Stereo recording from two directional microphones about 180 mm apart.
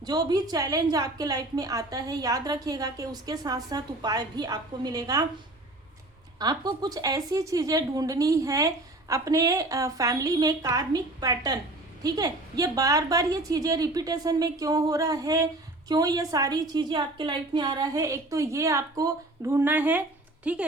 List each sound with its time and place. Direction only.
0.0 s a woman's voice: 20° right (ahead or behind)
6.4 s a woman's voice: 20° right (ahead or behind)